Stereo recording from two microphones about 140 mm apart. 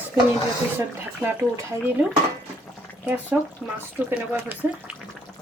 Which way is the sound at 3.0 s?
10° right (ahead or behind).